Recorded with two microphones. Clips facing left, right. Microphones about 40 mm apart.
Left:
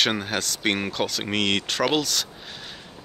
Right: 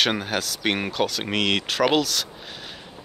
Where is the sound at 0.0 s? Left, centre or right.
Centre.